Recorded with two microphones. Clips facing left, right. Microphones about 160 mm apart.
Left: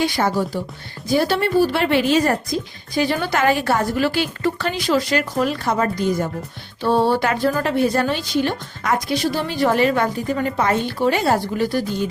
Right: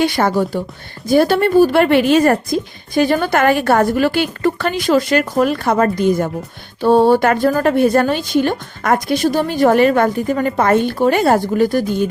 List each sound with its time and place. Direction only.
0.0 s a woman's voice: 60° right (ahead or behind)